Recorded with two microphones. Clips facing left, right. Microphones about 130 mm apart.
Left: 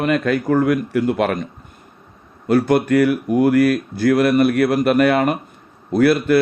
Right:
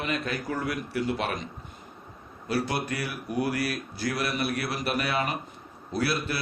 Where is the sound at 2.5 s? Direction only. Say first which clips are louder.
Left 14 dB; 50° left (ahead or behind).